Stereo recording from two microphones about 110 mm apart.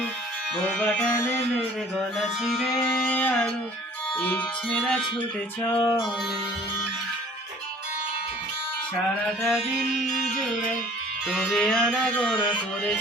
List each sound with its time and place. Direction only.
0.8 s music: 5° left (ahead or behind)
3.1 s music: 15° left (ahead or behind)
5.6 s music: 25° left (ahead or behind)
9.4 s music: 5° right (ahead or behind)